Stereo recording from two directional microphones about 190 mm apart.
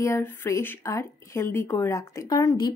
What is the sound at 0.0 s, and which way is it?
A woman's voice, 15° left (ahead or behind).